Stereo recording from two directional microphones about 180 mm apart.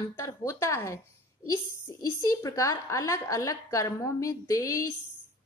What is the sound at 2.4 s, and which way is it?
A woman's voice, 20° left (ahead or behind).